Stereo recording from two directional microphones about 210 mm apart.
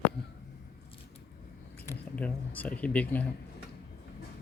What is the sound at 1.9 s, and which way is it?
Speech, 5° left (ahead or behind).